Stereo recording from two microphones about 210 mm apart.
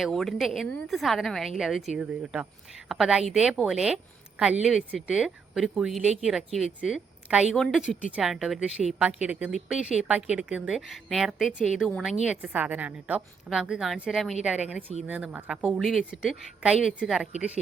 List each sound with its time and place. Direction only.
0.0 s a woman's voice: centre (ahead or behind)